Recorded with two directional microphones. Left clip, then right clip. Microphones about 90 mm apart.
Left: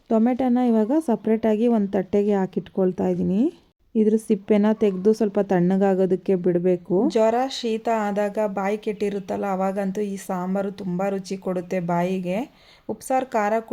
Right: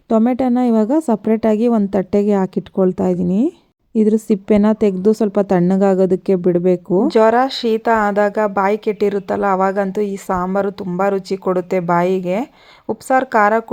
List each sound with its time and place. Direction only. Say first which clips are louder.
0.3 s a woman's voice: right 5 dB; 45° right (ahead or behind)
7.1 s speech: right 9 dB; 55° right (ahead or behind)